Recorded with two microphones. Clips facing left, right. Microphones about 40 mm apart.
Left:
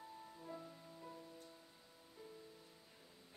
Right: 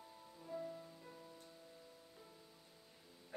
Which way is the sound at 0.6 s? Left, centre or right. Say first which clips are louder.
Right 8 dB; centre.